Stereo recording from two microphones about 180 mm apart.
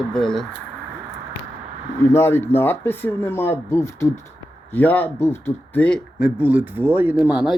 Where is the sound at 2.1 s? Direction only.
15° left (ahead or behind).